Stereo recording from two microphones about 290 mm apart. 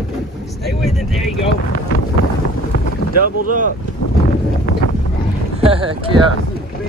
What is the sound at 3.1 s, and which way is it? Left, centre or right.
Speech, right.